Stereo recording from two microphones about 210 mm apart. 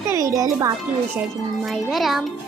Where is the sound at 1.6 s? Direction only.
Centre (ahead or behind).